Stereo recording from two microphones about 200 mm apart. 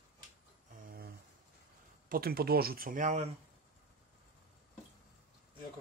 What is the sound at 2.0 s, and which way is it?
Speech, 50° right (ahead or behind).